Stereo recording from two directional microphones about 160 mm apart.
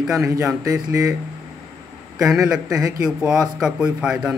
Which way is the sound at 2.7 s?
20° right (ahead or behind).